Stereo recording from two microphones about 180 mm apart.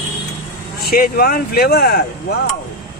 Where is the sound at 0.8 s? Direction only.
55° left (ahead or behind).